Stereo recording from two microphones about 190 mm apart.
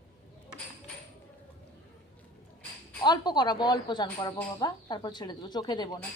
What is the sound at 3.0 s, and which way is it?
Speech, 20° left (ahead or behind).